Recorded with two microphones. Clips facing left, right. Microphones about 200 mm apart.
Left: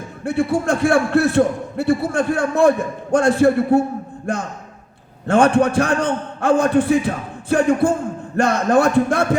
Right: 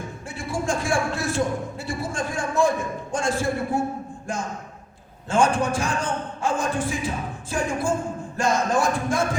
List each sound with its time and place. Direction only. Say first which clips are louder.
0.3 s a man's voice: left 10 dB; 65° left (ahead or behind)